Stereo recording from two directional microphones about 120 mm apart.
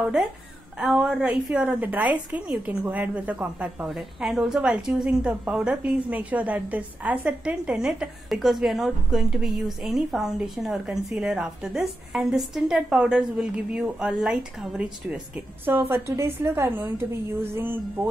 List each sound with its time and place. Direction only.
0.7 s a woman's voice: 5° right (ahead or behind)
15.6 s a woman's voice: 20° right (ahead or behind)